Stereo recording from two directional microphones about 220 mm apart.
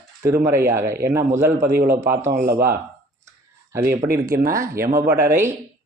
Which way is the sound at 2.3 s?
45° right (ahead or behind).